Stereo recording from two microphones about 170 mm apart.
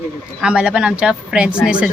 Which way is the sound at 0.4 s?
5° right (ahead or behind).